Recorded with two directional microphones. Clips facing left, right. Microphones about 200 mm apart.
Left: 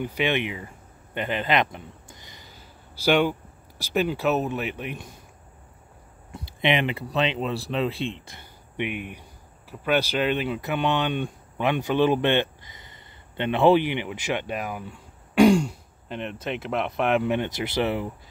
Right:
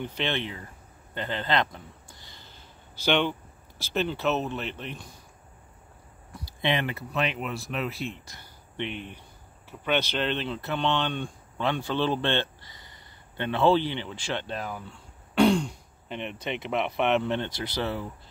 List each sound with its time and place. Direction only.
0.0 s speech: 15° left (ahead or behind)
3.1 s speech: 10° left (ahead or behind)
6.3 s speech: 20° left (ahead or behind)
8.7 s speech: 10° left (ahead or behind)